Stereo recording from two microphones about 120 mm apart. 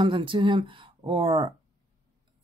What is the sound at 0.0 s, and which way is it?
Speech, 45° right (ahead or behind).